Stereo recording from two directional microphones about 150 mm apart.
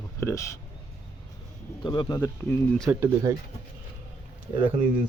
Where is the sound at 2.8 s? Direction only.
20° right (ahead or behind).